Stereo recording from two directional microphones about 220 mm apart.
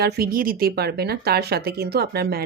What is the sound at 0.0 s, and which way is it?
Speech, 40° right (ahead or behind).